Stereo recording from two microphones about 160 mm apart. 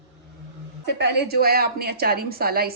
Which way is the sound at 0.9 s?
90° right.